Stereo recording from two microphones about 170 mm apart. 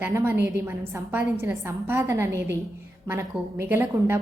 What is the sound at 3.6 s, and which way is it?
Speech, 15° right (ahead or behind).